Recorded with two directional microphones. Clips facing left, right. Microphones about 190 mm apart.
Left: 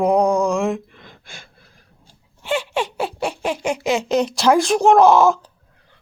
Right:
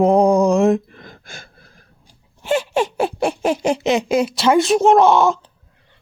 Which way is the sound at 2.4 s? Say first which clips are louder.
Right 4 dB; 45° right (ahead or behind).